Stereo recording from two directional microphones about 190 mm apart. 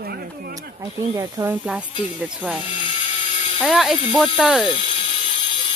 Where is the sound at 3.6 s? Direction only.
Centre (ahead or behind).